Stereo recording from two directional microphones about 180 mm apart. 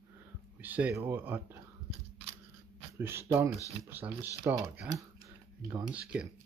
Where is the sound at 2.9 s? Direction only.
15° right (ahead or behind).